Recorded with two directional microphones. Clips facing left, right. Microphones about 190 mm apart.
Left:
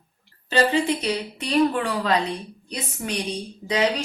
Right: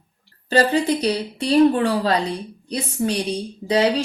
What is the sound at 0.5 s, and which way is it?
Speech, 40° right (ahead or behind).